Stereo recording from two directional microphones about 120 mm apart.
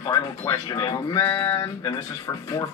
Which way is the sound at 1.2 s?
25° left (ahead or behind).